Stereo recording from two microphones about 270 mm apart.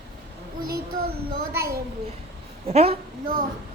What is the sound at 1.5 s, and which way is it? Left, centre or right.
Speech, centre.